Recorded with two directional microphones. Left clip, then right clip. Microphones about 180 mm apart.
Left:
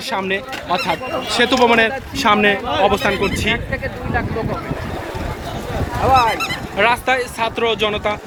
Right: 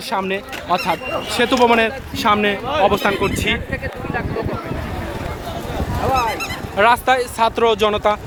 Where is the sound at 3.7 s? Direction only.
15° left (ahead or behind).